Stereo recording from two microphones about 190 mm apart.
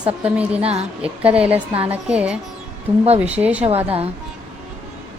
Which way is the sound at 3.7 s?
30° right (ahead or behind).